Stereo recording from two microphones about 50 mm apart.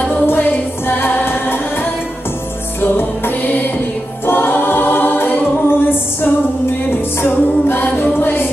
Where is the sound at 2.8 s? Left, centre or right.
Left.